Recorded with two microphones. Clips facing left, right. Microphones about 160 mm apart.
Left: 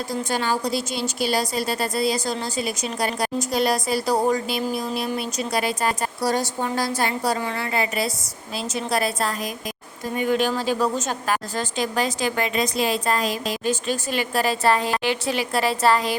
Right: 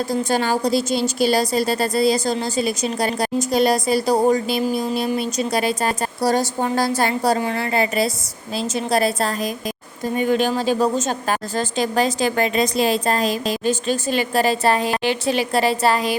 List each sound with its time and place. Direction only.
0.1 s a woman's voice: 35° right (ahead or behind)
15.8 s a woman's voice: 15° right (ahead or behind)